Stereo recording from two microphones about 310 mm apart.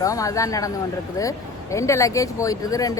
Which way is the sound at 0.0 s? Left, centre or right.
Centre.